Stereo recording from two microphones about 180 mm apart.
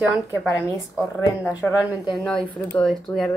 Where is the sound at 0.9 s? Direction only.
10° right (ahead or behind).